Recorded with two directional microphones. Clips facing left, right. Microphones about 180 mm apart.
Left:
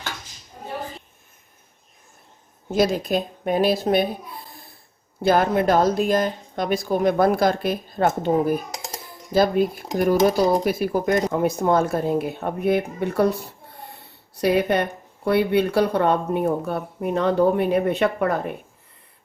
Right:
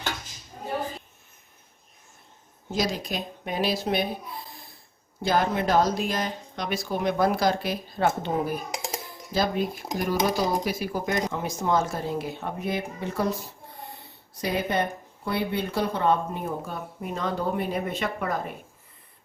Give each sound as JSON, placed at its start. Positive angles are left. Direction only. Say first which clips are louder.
{"t": 2.7, "sound": "speech", "louder": "left 8 dB", "side_deg": 55}
{"t": 5.2, "sound": "speech", "louder": "left 6 dB", "side_deg": 55}
{"t": 8.7, "sound": "dishes", "louder": "right 2 dB", "side_deg": -10}
{"t": 9.3, "sound": "a woman's voice", "louder": "left 7 dB", "side_deg": 50}